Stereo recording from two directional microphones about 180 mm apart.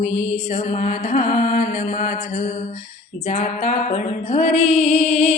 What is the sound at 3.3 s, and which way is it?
Music, 45° left (ahead or behind).